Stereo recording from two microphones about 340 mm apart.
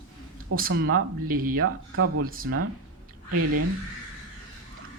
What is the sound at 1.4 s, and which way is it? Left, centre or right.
Speech, right.